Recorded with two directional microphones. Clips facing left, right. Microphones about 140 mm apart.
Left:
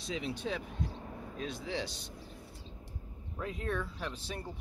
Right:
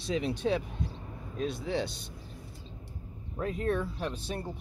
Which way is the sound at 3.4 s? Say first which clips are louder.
Right 6 dB; 45° right (ahead or behind).